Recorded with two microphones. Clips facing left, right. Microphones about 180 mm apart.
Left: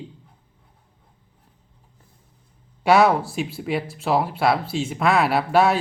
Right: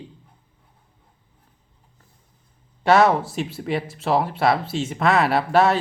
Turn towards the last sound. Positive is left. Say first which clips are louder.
# even
turn(degrees=0)  # may be behind; listen again after turning